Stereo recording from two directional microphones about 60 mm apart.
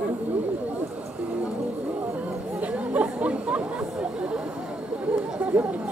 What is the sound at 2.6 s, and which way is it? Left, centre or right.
Chatter, right.